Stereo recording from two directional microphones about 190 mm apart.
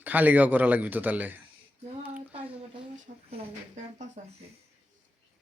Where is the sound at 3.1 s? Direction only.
45° right (ahead or behind).